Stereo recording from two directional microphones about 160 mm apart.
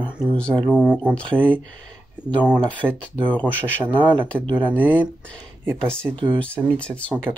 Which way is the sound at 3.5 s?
10° right (ahead or behind).